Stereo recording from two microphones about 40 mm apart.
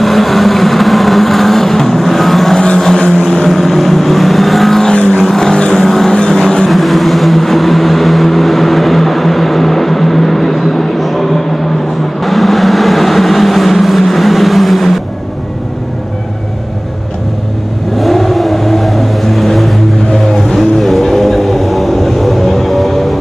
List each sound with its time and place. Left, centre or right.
0.0 s vehicle: centre
5.4 s vehicle: centre
5.8 s vehicle: centre
6.1 s vehicle: centre
6.7 s vehicle: centre
18.0 s vehicle: centre